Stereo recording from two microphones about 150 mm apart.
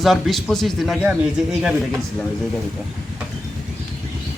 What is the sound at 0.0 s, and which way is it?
A man's voice, centre (ahead or behind).